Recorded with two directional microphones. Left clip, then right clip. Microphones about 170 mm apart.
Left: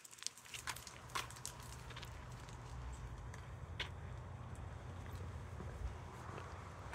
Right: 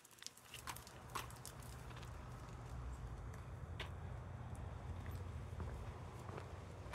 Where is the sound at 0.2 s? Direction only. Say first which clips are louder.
Left 5 dB; 55° right (ahead or behind).